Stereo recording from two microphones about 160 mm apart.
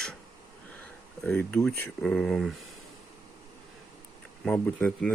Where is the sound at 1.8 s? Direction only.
5° left (ahead or behind).